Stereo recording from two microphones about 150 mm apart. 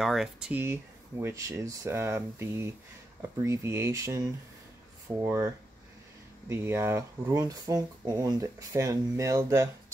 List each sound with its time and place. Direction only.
0.0 s speech: centre (ahead or behind); by 5.5 s 20° right (ahead or behind)
6.5 s speech: 15° right (ahead or behind)